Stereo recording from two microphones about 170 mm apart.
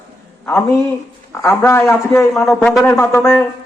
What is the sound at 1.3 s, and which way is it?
Speech, 15° left (ahead or behind).